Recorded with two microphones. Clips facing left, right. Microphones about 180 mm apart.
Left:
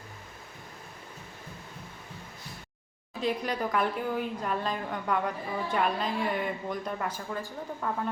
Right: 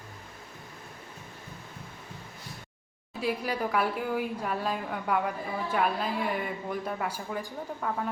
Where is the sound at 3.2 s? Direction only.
10° right (ahead or behind).